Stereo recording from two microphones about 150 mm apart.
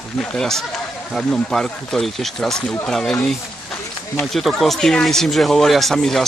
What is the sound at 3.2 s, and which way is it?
Run, 10° left (ahead or behind).